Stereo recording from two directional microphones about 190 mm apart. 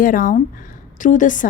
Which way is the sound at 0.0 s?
45° left (ahead or behind).